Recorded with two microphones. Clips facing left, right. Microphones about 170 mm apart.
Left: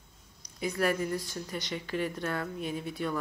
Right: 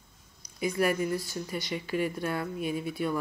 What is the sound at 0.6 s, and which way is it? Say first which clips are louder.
Speech: right 2 dB; 10° right (ahead or behind).